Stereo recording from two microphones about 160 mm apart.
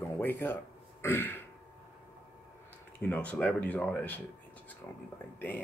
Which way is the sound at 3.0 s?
10° left (ahead or behind).